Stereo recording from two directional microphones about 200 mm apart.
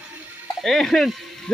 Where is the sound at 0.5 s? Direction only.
Centre (ahead or behind).